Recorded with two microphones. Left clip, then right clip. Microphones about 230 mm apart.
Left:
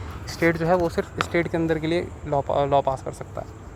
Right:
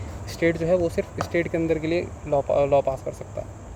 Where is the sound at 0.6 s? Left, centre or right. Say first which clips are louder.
Left 1 dB; left.